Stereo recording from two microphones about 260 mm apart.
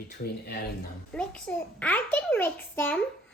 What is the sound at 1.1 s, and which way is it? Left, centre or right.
A child's voice, centre.